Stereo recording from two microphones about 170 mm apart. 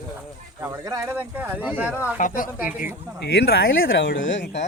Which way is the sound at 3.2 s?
85° left.